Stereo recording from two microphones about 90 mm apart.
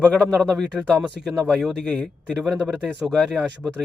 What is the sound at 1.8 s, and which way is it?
Speech, 15° left (ahead or behind).